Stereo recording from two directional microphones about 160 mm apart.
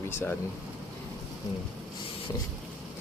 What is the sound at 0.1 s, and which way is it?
Speech, 15° left (ahead or behind).